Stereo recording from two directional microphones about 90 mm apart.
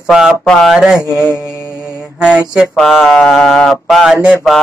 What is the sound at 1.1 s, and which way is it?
Mantra, 25° left (ahead or behind).